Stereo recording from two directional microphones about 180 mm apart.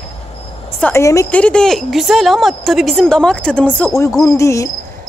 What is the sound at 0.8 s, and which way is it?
Speech, 15° left (ahead or behind).